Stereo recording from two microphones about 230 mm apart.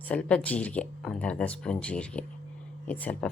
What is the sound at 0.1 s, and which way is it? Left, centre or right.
Speech, centre.